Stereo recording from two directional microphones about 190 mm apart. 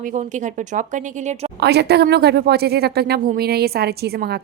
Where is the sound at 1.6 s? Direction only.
60° right (ahead or behind).